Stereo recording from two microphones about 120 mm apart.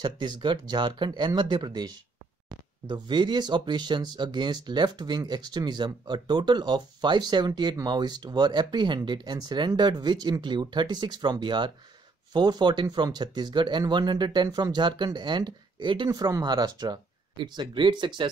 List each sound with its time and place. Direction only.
0.0 s speech: 40° right (ahead or behind)
2.9 s speech: 40° right (ahead or behind)
16.1 s speech: 30° right (ahead or behind)